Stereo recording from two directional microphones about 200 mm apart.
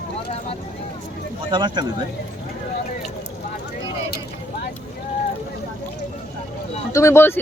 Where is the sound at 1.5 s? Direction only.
20° right (ahead or behind).